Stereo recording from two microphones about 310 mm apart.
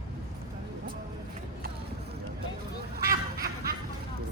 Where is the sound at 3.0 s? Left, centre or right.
Right.